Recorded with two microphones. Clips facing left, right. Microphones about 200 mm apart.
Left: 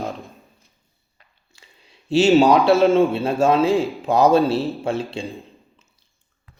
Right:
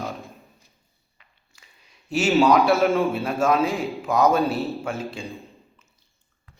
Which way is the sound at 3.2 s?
30° left (ahead or behind).